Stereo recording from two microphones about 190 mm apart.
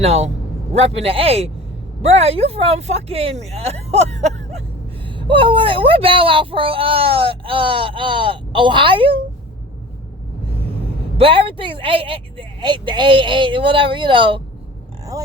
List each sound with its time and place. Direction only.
0.0 s speech: 35° right (ahead or behind)
5.0 s speech: 25° right (ahead or behind)
11.2 s speech: 30° right (ahead or behind)